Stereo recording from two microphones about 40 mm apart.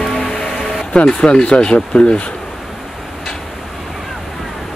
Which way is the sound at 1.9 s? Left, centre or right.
Left.